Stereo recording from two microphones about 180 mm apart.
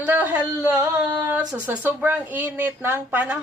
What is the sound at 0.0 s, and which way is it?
Speech, 10° right (ahead or behind).